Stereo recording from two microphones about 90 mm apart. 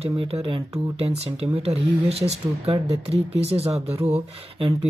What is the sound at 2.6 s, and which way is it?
Speech, 90° right.